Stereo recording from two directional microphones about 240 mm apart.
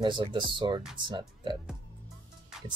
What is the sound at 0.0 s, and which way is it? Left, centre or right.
Speech, centre.